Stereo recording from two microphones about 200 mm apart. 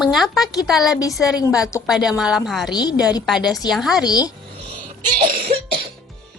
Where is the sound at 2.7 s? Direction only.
20° left (ahead or behind).